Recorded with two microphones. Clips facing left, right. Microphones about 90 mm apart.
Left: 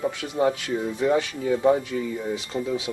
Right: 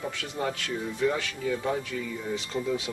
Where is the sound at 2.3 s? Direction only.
10° left (ahead or behind).